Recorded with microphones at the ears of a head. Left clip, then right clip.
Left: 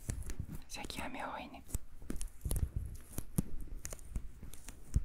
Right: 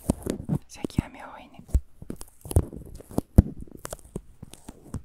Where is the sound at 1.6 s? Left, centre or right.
Right.